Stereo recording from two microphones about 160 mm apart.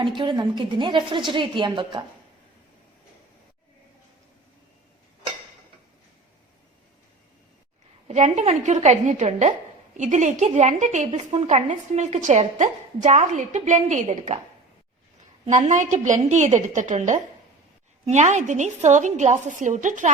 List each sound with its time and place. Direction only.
0.0 s a woman's voice: 30° right (ahead or behind)
8.0 s a woman's voice: 45° right (ahead or behind)
15.4 s a woman's voice: 50° right (ahead or behind)